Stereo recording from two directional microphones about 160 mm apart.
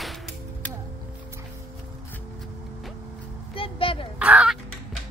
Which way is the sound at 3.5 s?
35° left (ahead or behind).